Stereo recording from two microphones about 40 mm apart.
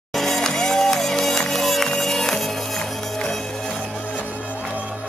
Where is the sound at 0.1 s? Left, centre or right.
Centre.